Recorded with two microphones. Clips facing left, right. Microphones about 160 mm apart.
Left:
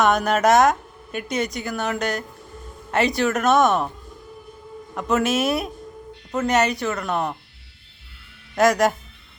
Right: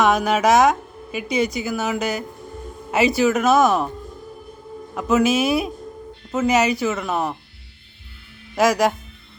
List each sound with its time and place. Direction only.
0.0 s a woman's voice: centre (ahead or behind)
4.9 s a woman's voice: centre (ahead or behind)
8.5 s a woman's voice: centre (ahead or behind)